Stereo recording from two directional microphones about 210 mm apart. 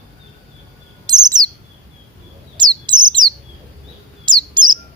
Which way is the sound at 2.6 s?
20° right (ahead or behind).